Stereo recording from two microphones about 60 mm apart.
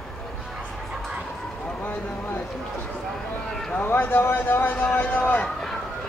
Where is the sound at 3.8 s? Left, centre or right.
Left.